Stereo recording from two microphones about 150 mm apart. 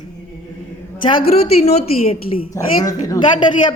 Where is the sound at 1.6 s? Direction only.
40° left (ahead or behind).